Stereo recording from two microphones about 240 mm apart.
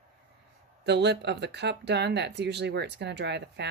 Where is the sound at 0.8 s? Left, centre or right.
Right.